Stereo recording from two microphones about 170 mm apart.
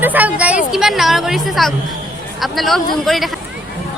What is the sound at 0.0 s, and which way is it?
A woman's voice, 10° right (ahead or behind).